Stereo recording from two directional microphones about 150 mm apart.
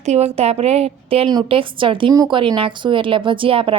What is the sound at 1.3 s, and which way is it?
Speech, 30° right (ahead or behind).